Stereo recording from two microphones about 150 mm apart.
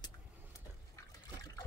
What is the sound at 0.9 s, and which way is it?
Liquid, 25° left (ahead or behind).